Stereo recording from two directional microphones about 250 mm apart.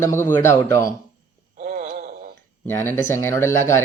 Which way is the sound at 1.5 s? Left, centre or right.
Right.